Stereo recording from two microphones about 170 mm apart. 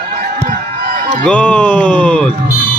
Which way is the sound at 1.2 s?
5° left (ahead or behind).